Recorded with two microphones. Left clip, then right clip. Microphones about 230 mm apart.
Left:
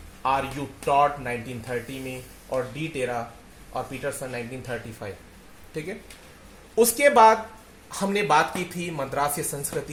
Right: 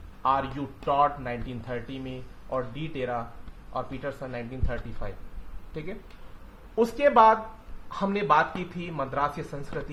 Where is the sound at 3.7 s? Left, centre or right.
Left.